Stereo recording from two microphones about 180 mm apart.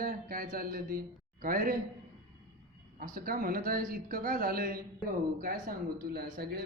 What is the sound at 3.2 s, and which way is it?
Speech, 55° right (ahead or behind).